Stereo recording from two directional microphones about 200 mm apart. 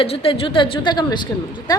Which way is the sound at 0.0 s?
30° left (ahead or behind).